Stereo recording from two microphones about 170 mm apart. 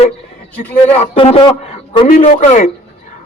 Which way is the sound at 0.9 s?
35° left (ahead or behind).